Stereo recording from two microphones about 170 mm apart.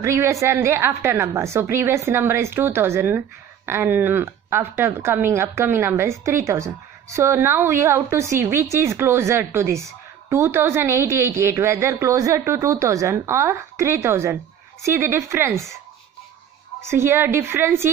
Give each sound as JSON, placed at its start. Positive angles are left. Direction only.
{"t": 0.0, "sound": "a woman's voice", "side_deg": -15}
{"t": 16.8, "sound": "a woman's voice", "side_deg": -15}